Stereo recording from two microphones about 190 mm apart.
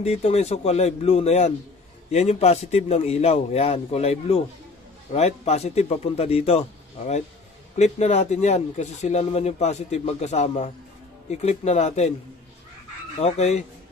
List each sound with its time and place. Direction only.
0.0 s speech: 35° left (ahead or behind)
7.7 s speech: 35° left (ahead or behind)
13.2 s speech: 35° left (ahead or behind)